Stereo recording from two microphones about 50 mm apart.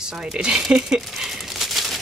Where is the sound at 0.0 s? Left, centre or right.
Centre.